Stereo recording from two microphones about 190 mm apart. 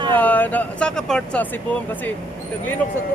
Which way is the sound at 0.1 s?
10° left (ahead or behind).